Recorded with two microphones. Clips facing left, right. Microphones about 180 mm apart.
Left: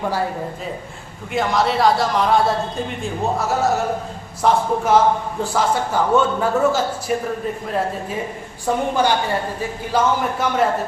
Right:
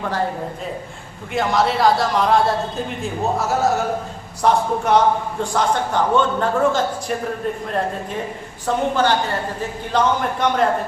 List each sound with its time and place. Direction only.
1.3 s a man's voice: centre (ahead or behind)
8.6 s a woman's voice: 10° left (ahead or behind)